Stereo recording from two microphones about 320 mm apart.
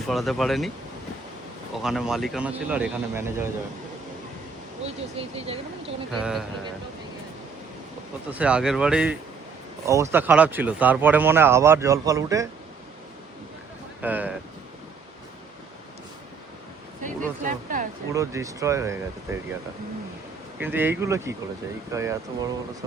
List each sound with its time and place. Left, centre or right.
0.1 s speech: centre
1.7 s speech: centre
5.1 s speech: centre
6.1 s speech: centre
8.3 s speech: centre
14.0 s speech: centre
17.0 s speech: right
18.1 s speech: centre
20.6 s speech: centre